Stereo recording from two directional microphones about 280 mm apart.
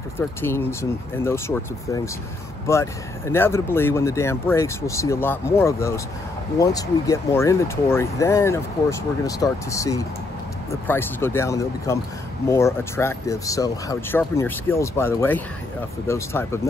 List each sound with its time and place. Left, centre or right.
0.2 s speech: centre